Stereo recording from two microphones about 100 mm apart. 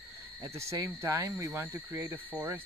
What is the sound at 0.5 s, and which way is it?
Speech, 30° right (ahead or behind).